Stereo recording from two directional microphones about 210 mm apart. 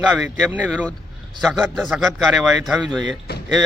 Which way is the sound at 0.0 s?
Centre (ahead or behind).